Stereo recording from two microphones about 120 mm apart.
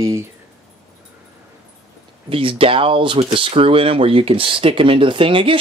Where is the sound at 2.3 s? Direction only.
50° right (ahead or behind).